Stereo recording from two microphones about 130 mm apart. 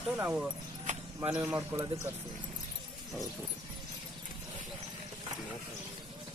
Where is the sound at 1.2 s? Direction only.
15° right (ahead or behind).